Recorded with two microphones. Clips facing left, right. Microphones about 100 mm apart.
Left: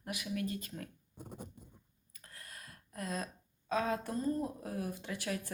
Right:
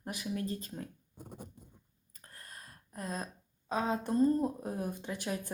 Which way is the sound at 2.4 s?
30° right (ahead or behind).